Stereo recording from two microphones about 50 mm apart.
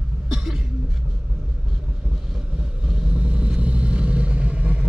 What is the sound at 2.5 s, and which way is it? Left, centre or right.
Vehicle, centre.